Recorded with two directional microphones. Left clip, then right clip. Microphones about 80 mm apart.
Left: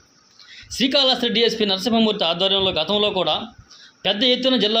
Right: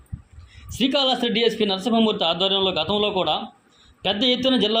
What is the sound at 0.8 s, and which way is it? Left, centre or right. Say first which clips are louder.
A man's voice: left 3 dB; left.